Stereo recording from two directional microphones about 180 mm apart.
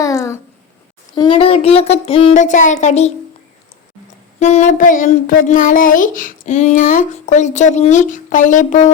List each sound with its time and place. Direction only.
0.0 s a sound: 20° left (ahead or behind)
1.1 s speech: 25° left (ahead or behind)
4.4 s speech: 40° left (ahead or behind)